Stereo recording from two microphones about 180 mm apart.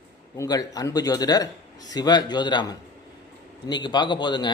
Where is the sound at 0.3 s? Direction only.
20° left (ahead or behind).